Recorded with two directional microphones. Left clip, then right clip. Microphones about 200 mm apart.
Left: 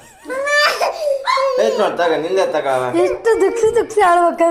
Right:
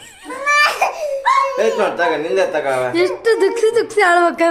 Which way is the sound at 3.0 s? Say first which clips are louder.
Even; 15° right (ahead or behind).